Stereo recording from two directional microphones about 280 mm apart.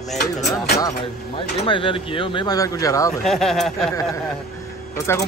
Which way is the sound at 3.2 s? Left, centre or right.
Centre.